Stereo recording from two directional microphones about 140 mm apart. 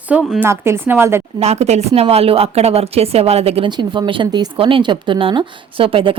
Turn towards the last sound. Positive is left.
turn(degrees=-40)  # may be behind; listen again after turning